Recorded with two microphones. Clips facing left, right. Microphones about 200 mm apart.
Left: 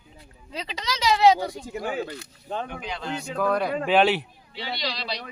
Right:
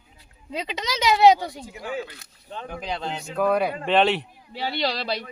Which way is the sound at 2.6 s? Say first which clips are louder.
Right 3 dB; 35° right (ahead or behind).